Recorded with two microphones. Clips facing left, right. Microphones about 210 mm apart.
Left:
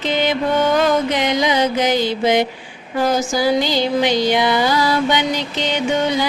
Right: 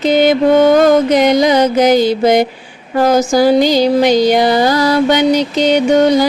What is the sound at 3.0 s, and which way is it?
Music, 45° right (ahead or behind).